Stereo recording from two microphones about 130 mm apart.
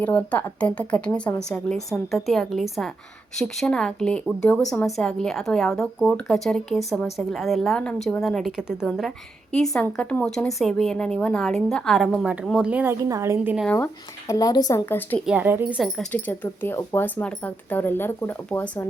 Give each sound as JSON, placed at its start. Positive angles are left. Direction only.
{"t": 0.0, "sound": "speech", "side_deg": 10}
{"t": 12.2, "sound": "a woman's voice", "side_deg": -10}
{"t": 13.7, "sound": "speech", "side_deg": 25}
{"t": 14.8, "sound": "speech", "side_deg": 15}
{"t": 15.3, "sound": "a woman's voice", "side_deg": -15}
{"t": 15.8, "sound": "speech", "side_deg": 5}